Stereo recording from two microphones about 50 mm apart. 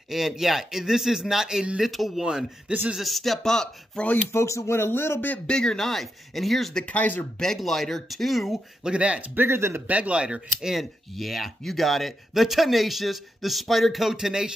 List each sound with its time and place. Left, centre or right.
0.1 s a man's voice: centre
4.3 s speech: left
5.5 s speech: centre
6.9 s speech: left
7.3 s speech: centre
8.8 s speech: right
9.3 s speech: right
9.8 s speech: right
10.7 s speech: centre